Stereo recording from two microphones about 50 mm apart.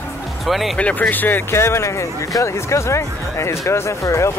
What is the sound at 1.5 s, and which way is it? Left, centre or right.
Speech, left.